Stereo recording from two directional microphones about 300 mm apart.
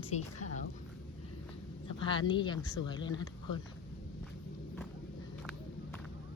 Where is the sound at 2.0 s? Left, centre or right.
Centre.